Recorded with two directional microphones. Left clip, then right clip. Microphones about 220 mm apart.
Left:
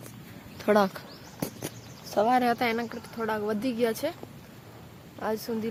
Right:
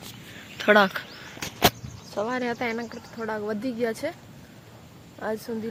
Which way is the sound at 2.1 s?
40° left (ahead or behind).